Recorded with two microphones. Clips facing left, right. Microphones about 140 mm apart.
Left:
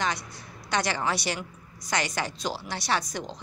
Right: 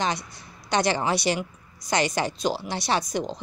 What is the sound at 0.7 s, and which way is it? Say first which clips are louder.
A woman's voice: right 4 dB; 25° right (ahead or behind).